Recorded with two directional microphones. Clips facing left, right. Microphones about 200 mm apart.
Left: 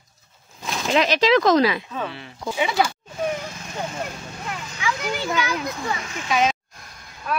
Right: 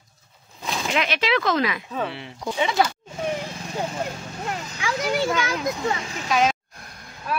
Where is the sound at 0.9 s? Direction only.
35° left (ahead or behind).